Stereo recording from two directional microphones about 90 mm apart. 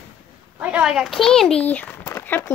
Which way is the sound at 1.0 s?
5° left (ahead or behind).